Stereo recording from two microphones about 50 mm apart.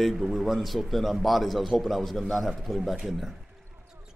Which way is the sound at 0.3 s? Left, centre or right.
Centre.